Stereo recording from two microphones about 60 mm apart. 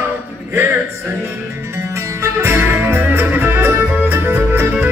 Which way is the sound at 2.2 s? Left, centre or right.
Right.